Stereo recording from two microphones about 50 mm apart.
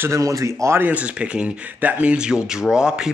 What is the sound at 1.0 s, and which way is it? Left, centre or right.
Speech, right.